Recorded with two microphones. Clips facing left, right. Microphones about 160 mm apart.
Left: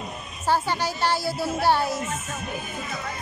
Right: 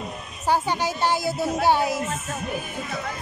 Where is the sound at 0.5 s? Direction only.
20° right (ahead or behind).